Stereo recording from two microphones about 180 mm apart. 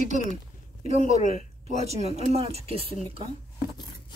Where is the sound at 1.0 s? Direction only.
35° right (ahead or behind).